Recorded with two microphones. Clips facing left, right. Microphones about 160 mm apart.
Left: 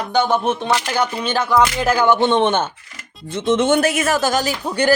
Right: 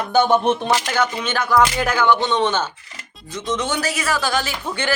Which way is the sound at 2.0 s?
50° left (ahead or behind).